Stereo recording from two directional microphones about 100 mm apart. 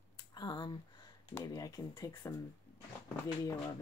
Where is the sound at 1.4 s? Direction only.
40° left (ahead or behind).